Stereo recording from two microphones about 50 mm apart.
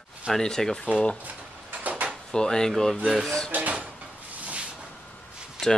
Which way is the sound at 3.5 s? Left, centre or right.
Right.